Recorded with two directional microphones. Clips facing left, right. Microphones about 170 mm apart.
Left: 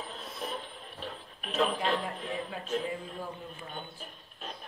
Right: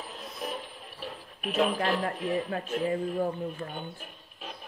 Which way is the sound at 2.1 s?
5° right (ahead or behind).